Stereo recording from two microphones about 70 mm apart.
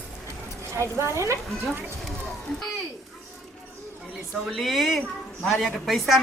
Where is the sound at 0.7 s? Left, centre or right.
Right.